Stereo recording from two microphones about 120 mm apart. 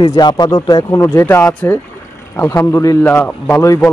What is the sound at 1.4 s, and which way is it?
Speech, 10° left (ahead or behind).